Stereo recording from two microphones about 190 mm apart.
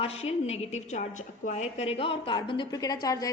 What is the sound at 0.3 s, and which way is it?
A woman's voice, 35° left (ahead or behind).